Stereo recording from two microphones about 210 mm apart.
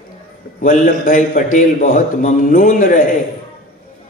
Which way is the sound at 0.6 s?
40° left (ahead or behind).